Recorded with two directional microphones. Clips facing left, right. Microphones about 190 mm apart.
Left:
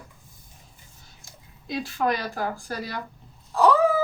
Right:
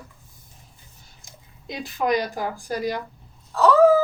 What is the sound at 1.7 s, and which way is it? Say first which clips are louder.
Speech: right 2 dB; 20° right (ahead or behind).